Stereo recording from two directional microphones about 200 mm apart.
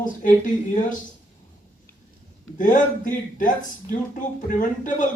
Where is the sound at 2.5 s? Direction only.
40° left (ahead or behind).